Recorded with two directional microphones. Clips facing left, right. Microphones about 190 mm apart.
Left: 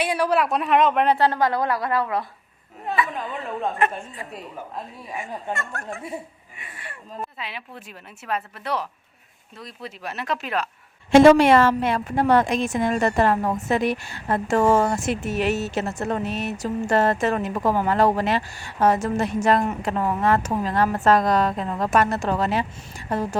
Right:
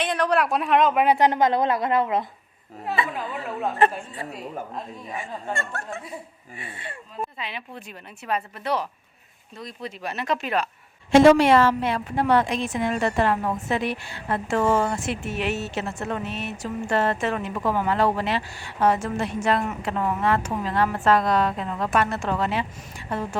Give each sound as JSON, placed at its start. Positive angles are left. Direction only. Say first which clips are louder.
{"t": 0.0, "sound": "a woman's voice", "louder": "left 1 dB", "side_deg": 10}
{"t": 1.0, "sound": "a woman's voice", "louder": "right 1 dB", "side_deg": -15}
{"t": 5.9, "sound": "speech", "louder": "left 2 dB", "side_deg": 25}
{"t": 6.6, "sound": "a woman's voice", "louder": "right 4 dB", "side_deg": -25}
{"t": 7.2, "sound": "a woman's voice", "louder": "right 2 dB", "side_deg": 5}
{"t": 11.1, "sound": "a woman's voice", "louder": "left 2 dB", "side_deg": 50}